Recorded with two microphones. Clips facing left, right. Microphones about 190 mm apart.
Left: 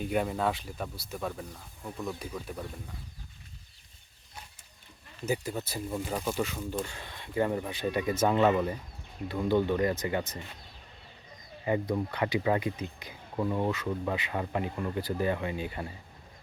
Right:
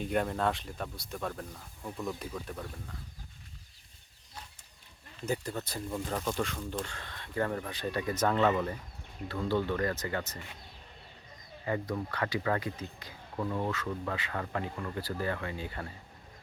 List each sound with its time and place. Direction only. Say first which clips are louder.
0.0 s speech: left 1 dB; 5° left (ahead or behind)
5.2 s speech: left 2 dB; 5° left (ahead or behind)
11.6 s speech: left 4 dB; 20° left (ahead or behind)